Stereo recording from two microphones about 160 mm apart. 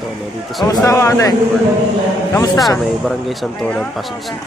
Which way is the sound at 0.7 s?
20° left (ahead or behind).